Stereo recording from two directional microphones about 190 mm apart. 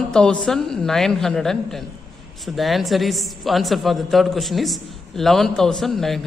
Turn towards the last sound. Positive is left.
turn(degrees=0)  # may be behind; listen again after turning